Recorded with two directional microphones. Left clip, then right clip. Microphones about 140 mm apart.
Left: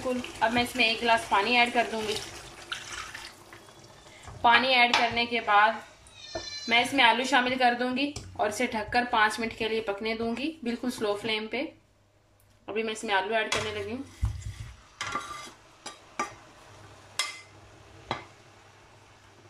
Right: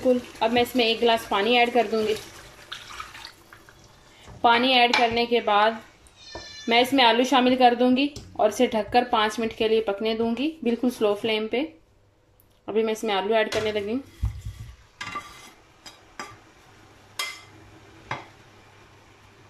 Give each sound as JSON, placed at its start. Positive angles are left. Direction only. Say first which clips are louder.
{"t": 0.4, "sound": "a woman's voice", "louder": "right 3 dB", "side_deg": -30}
{"t": 4.4, "sound": "a woman's voice", "louder": "right 3 dB", "side_deg": -20}
{"t": 5.3, "sound": "a woman's voice", "louder": "right 2 dB", "side_deg": -35}
{"t": 12.6, "sound": "a woman's voice", "louder": "right 7 dB", "side_deg": -30}